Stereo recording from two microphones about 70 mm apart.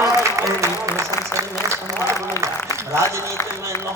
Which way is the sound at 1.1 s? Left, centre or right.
Left.